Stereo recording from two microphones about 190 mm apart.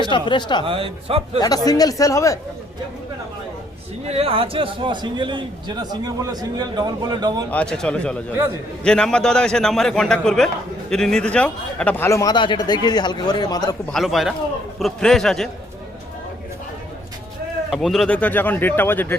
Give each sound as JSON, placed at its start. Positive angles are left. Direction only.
{"t": 0.0, "sound": "speech", "side_deg": 25}
{"t": 0.6, "sound": "a man's voice", "side_deg": -30}
{"t": 1.4, "sound": "speech", "side_deg": 20}
{"t": 4.0, "sound": "a man's voice", "side_deg": -30}
{"t": 7.5, "sound": "a man's voice", "side_deg": 5}
{"t": 13.9, "sound": "a man's voice", "side_deg": 0}
{"t": 17.7, "sound": "speech", "side_deg": 0}